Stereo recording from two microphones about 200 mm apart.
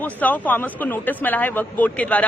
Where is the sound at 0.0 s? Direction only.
10° left (ahead or behind).